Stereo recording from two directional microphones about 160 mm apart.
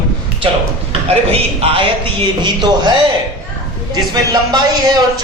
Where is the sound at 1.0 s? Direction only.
40° right (ahead or behind).